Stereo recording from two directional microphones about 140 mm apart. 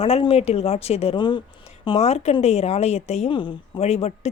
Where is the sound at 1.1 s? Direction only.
35° left (ahead or behind).